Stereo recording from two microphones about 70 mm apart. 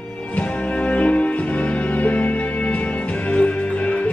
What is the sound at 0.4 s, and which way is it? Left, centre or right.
Music, centre.